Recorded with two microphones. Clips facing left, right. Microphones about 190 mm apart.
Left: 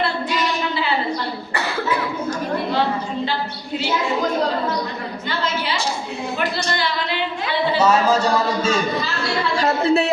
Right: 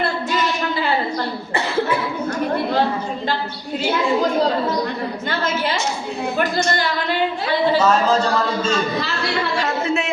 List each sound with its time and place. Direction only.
6.7 s a sound: 45° right (ahead or behind)
7.8 s a man's voice: 10° left (ahead or behind)
9.6 s speech: 35° left (ahead or behind)